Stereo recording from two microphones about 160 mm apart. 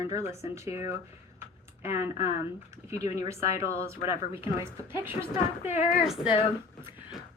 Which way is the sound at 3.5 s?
20° right (ahead or behind).